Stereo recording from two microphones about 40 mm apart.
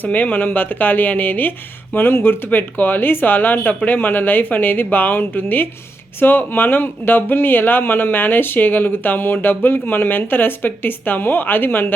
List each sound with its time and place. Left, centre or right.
0.0 s speech: left
2.0 s speech: left